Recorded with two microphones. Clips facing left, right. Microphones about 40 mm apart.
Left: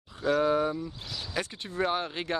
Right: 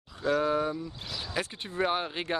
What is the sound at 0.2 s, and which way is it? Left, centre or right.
Speech, centre.